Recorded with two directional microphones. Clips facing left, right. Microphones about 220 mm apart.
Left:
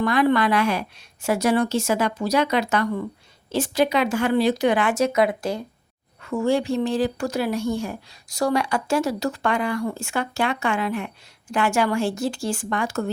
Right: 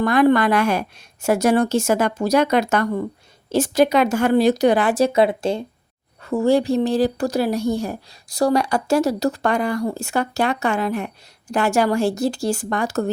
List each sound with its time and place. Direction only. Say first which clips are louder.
0.0 s speech: right 4 dB; 45° right (ahead or behind)